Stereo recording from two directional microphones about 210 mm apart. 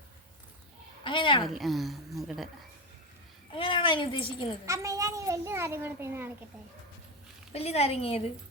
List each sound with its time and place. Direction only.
1.0 s speech: 25° left (ahead or behind)
1.5 s a woman's voice: centre (ahead or behind)
3.5 s a woman's voice: 25° left (ahead or behind)
4.6 s a child's voice: 15° right (ahead or behind)
7.5 s a woman's voice: 30° left (ahead or behind)